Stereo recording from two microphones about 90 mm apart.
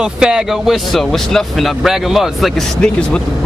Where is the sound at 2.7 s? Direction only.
10° left (ahead or behind).